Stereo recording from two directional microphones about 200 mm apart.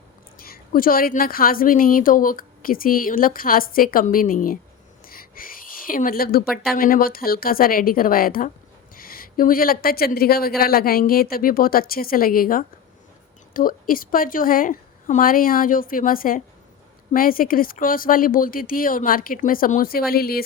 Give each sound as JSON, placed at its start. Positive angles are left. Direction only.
{"t": 0.3, "sound": "a woman's voice", "side_deg": 50}
{"t": 5.0, "sound": "a sound", "side_deg": 45}
{"t": 6.7, "sound": "a woman's voice", "side_deg": 45}